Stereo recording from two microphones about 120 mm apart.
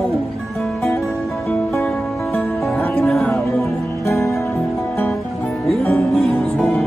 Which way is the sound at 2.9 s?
5° left (ahead or behind).